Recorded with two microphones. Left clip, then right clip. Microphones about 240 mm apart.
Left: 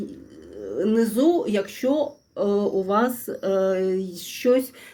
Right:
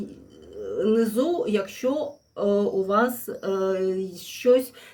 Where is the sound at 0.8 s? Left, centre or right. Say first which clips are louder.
Left 1 dB; centre.